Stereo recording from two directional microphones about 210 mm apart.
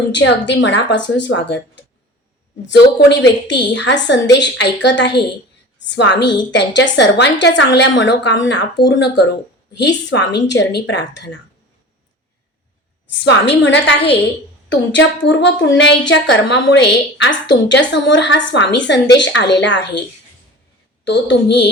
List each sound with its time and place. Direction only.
0.1 s a woman's voice: 55° left (ahead or behind)
13.1 s a woman's voice: 55° left (ahead or behind)
21.0 s a woman's voice: 60° left (ahead or behind)